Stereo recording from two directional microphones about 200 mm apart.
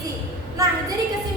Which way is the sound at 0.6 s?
15° right (ahead or behind).